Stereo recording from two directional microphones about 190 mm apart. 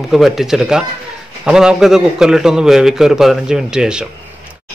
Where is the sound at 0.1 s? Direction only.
Centre (ahead or behind).